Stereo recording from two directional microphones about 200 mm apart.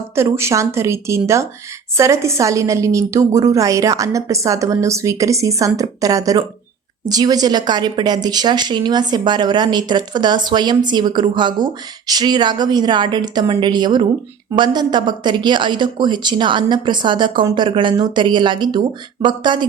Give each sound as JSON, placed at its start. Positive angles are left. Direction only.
{"t": 0.2, "sound": "a woman's voice", "side_deg": -15}